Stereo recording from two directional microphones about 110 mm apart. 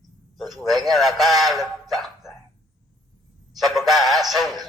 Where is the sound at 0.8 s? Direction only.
Centre (ahead or behind).